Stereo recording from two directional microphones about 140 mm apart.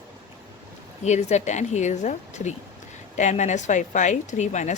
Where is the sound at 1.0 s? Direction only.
55° left (ahead or behind).